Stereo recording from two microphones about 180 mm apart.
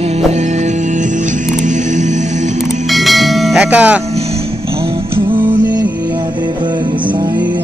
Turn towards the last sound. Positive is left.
turn(degrees=-25)  # may be behind; listen again after turning